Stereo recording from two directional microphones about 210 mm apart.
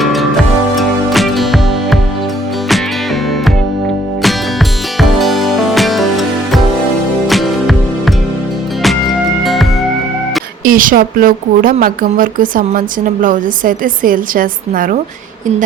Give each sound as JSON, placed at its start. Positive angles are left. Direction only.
{"t": 0.0, "sound": "music", "side_deg": 0}
{"t": 4.9, "sound": "music", "side_deg": 0}
{"t": 9.4, "sound": "music", "side_deg": 0}
{"t": 10.6, "sound": "a woman's voice", "side_deg": -40}